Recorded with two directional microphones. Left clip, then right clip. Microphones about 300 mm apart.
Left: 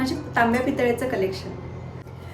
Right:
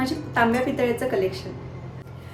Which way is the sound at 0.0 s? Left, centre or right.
Centre.